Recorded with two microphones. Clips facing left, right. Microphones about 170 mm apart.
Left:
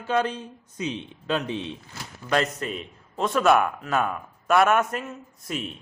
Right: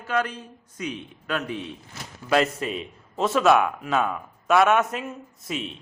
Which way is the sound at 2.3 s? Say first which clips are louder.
Right 3 dB; 5° right (ahead or behind).